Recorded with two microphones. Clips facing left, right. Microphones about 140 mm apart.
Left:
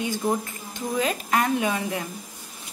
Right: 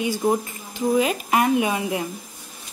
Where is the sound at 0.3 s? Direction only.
10° right (ahead or behind).